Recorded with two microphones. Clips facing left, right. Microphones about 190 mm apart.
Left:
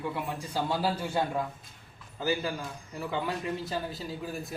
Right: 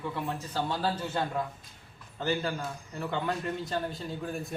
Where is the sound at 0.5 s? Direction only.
10° left (ahead or behind).